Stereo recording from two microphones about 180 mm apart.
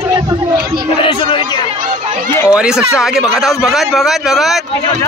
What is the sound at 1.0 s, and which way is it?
Speech, 30° left (ahead or behind).